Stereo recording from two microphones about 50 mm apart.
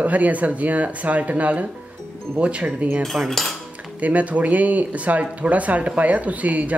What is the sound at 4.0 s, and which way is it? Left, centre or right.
Speech, right.